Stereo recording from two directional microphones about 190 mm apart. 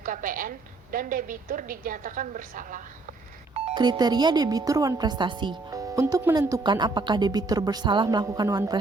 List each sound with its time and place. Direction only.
0.0 s a woman's voice: 45° right (ahead or behind)
3.8 s speech: 20° right (ahead or behind)